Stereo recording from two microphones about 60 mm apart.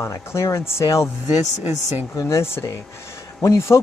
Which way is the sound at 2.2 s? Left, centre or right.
Left.